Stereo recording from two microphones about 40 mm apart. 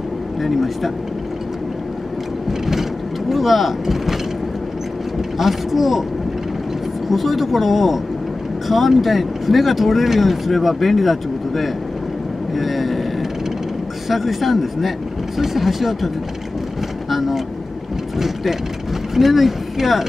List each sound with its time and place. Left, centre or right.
0.4 s speech: centre
2.6 s vehicle: centre
5.4 s speech: centre
7.1 s speech: centre
14.0 s speech: centre
17.1 s vehicle: centre
19.1 s speech: centre